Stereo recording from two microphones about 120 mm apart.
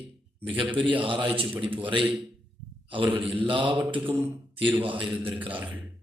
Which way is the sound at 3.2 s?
45° right (ahead or behind).